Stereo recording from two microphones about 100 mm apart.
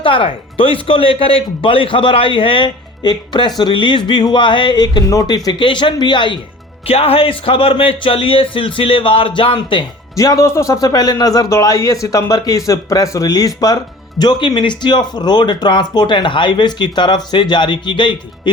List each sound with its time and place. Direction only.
0.0 s speech: 60° left (ahead or behind)
6.8 s speech: 75° left (ahead or behind); by 9.8 s 55° left (ahead or behind)
10.2 s a man's voice: 35° left (ahead or behind); by 18.5 s 50° left (ahead or behind)